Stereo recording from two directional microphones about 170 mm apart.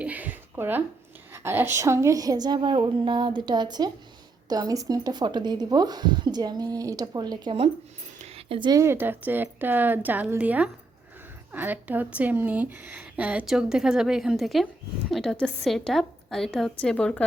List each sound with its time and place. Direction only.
0.0 s a sound: 10° right (ahead or behind)
1.3 s speech: 15° right (ahead or behind)
8.2 s a woman's voice: 35° right (ahead or behind); by 17.2 s 5° left (ahead or behind)